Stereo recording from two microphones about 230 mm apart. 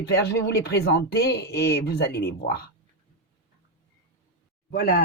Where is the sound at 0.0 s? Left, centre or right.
Left.